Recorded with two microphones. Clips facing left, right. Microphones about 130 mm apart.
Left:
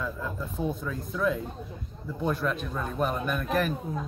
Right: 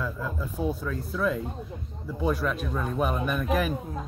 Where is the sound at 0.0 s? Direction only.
5° right (ahead or behind).